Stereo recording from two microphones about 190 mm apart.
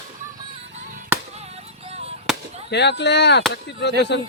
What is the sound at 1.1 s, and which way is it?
Music, 10° right (ahead or behind).